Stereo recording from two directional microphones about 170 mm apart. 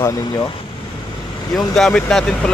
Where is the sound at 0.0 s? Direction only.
20° left (ahead or behind).